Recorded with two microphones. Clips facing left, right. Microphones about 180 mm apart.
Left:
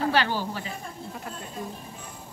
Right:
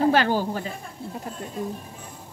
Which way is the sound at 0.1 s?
45° right (ahead or behind).